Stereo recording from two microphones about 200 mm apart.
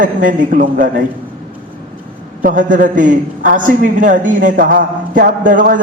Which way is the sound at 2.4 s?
40° right (ahead or behind).